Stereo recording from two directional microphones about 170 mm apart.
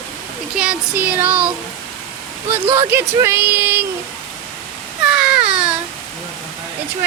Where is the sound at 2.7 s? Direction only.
15° right (ahead or behind).